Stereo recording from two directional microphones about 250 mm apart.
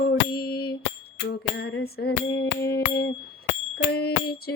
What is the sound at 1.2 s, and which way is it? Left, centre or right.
Music, left.